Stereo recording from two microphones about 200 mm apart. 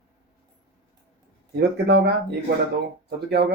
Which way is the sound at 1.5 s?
55° right (ahead or behind).